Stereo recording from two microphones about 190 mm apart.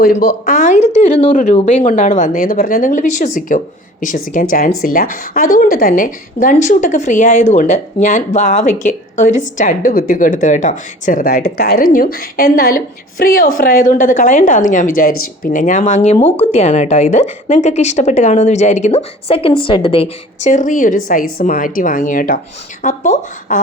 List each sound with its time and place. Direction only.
0.0 s a woman's voice: 55° left (ahead or behind)